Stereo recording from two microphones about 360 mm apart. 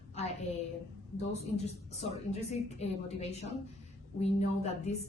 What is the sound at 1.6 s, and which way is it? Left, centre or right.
A woman's voice, centre.